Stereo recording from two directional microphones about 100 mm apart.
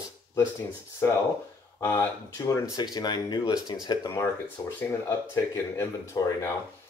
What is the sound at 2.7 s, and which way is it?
A man's voice, 45° left (ahead or behind).